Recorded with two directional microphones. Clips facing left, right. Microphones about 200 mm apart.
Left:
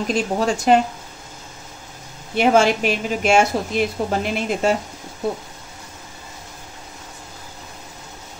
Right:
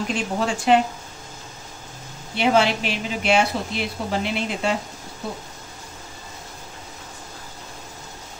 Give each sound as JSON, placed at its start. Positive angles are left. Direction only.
{"t": 0.1, "sound": "speech", "side_deg": 40}
{"t": 2.3, "sound": "a woman's voice", "side_deg": 45}